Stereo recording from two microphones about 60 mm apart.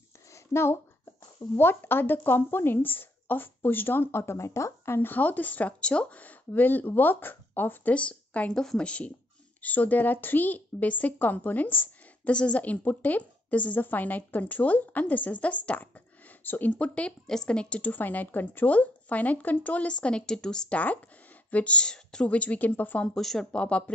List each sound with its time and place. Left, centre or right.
0.3 s a sound: left
1.6 s speech: left
7.9 s a woman's voice: centre
17.9 s a woman's voice: left; by 20.7 s centre
20.7 s a woman's voice: left
23.1 s speech: centre
23.5 s a woman's voice: centre